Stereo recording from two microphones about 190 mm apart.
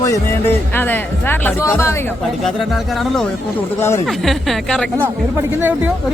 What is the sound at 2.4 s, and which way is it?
Speech, centre (ahead or behind).